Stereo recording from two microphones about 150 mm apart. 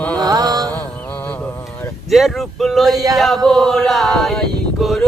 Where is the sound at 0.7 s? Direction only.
10° left (ahead or behind).